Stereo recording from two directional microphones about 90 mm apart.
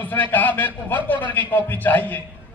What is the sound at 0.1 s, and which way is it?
A man's voice, 20° left (ahead or behind).